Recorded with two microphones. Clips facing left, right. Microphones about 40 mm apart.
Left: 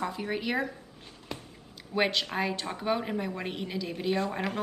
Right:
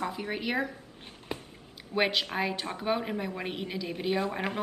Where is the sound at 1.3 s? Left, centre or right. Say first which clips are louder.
Right 2 dB; right.